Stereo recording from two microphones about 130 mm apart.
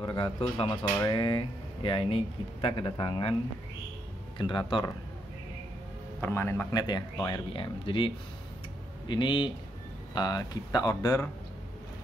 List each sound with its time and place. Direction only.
0.0 s speech: 40° left (ahead or behind)
0.8 s speech: 30° left (ahead or behind)
4.4 s speech: 40° left (ahead or behind)
6.2 s speech: 20° left (ahead or behind)
6.7 s speech: 30° left (ahead or behind)